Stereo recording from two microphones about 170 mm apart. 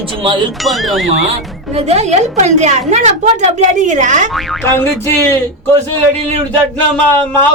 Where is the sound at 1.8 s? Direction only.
40° right (ahead or behind).